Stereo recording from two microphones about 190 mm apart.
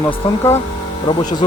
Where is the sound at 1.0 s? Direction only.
25° left (ahead or behind).